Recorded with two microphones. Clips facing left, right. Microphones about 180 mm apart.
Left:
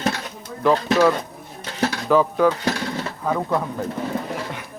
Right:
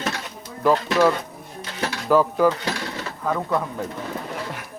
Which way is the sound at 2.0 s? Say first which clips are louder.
Even; 5° right (ahead or behind).